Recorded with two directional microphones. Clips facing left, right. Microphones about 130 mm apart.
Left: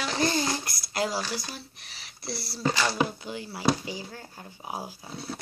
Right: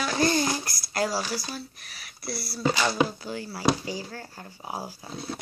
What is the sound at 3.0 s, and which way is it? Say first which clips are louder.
Child singing: right 2 dB; 20° left (ahead or behind).